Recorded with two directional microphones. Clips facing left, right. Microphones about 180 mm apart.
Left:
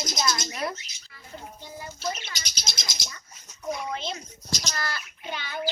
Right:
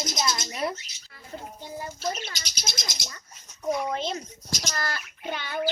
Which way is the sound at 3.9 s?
45° right (ahead or behind).